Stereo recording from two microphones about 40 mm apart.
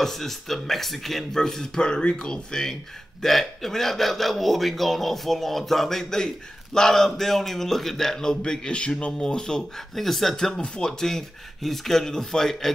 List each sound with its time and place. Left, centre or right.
0.0 s speech: centre
8.5 s speech: left; by 10.5 s centre
10.5 s speech: centre